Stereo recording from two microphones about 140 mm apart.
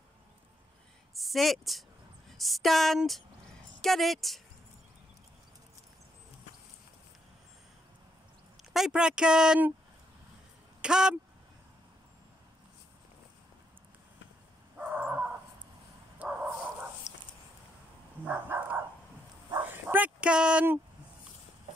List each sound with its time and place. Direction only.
1.1 s a woman's voice: centre (ahead or behind)
8.7 s speech: 5° right (ahead or behind)
10.8 s speech: 5° right (ahead or behind)
14.8 s dog: 10° right (ahead or behind)
16.2 s bow-wow: 10° right (ahead or behind)
17.1 s a sound: 55° left (ahead or behind)
18.2 s dog: 15° right (ahead or behind)